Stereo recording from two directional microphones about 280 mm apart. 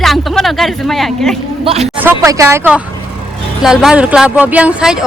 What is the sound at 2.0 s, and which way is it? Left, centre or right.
Speech, centre.